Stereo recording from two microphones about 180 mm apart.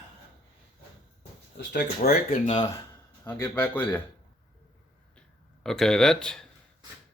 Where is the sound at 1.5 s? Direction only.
60° left (ahead or behind).